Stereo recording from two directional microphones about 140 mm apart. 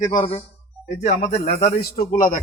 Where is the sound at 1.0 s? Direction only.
50° left (ahead or behind).